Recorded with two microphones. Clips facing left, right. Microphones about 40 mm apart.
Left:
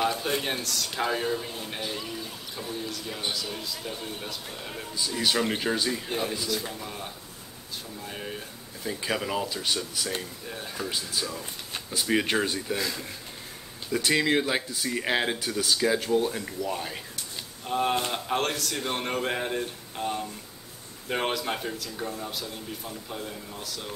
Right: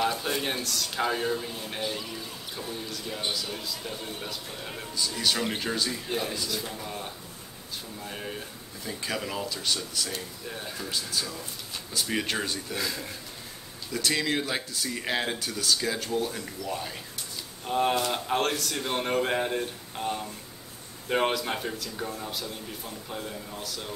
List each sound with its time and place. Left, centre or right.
0.0 s speech: centre
4.9 s speech: centre
8.8 s speech: centre
10.5 s speech: centre
10.8 s speech: centre
12.7 s speech: centre
13.9 s speech: centre
17.6 s speech: centre